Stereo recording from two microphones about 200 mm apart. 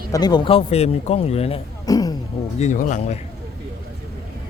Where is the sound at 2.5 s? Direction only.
35° left (ahead or behind).